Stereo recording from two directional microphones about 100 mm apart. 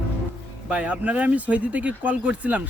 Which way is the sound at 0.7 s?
10° right (ahead or behind).